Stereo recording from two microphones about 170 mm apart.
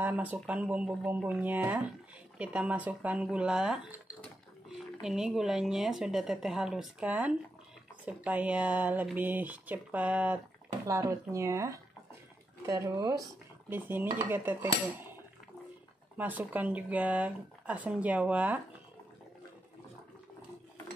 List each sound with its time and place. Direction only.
0.0 s speech: 10° right (ahead or behind)
5.0 s a woman's voice: 5° right (ahead or behind)
16.2 s speech: 10° right (ahead or behind)